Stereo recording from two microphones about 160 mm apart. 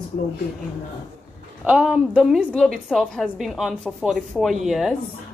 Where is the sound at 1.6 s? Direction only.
5° right (ahead or behind).